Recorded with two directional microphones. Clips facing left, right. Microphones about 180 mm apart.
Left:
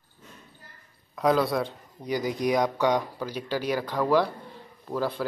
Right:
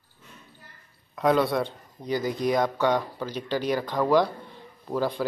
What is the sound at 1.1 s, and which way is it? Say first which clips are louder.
Speech: right 1 dB; centre (ahead or behind).